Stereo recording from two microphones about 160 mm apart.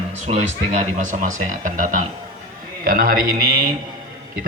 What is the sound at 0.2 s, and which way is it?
A man's voice, 45° right (ahead or behind).